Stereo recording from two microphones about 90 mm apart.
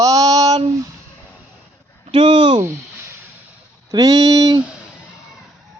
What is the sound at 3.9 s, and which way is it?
Speech, 45° right (ahead or behind).